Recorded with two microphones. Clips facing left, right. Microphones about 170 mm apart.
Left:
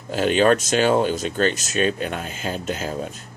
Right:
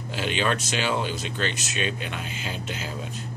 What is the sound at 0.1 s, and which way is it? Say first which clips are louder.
Speech: left 9 dB; 45° left (ahead or behind).